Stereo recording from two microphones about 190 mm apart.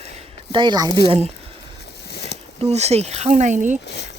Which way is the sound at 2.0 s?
60° left (ahead or behind).